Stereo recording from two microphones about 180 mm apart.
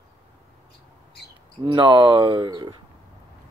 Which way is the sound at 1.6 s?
25° right (ahead or behind).